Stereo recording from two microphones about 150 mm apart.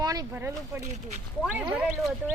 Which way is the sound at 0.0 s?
25° right (ahead or behind).